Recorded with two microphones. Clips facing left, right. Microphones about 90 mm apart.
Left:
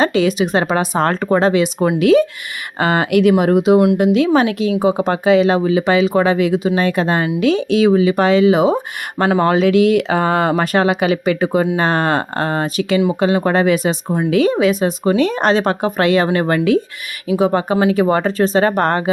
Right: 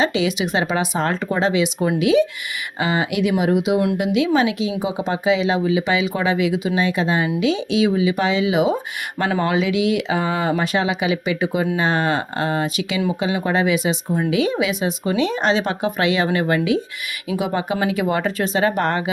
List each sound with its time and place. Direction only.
0.0 s speech: 45° left (ahead or behind)